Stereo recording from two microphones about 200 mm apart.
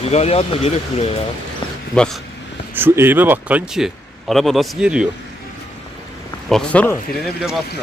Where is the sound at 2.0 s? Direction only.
5° left (ahead or behind).